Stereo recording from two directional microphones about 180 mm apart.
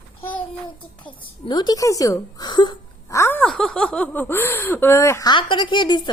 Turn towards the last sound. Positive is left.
turn(degrees=25)  # may be behind; listen again after turning